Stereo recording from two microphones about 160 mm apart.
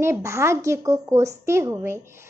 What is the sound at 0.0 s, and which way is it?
A child's voice, 15° right (ahead or behind).